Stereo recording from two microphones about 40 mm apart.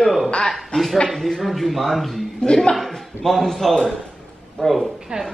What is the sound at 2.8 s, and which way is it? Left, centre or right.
A man's voice, centre.